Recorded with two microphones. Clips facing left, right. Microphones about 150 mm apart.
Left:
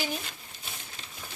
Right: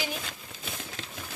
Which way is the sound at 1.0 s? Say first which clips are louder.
Right 6 dB; 90° right.